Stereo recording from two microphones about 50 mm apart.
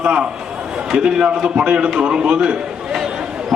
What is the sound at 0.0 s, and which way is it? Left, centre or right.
A man's voice, centre.